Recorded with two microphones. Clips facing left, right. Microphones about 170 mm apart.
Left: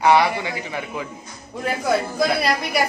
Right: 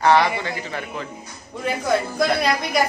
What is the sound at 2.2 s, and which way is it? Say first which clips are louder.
Speech: even; 5° left (ahead or behind).